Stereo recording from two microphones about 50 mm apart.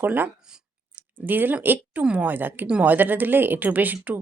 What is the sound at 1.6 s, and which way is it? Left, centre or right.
Speech, right.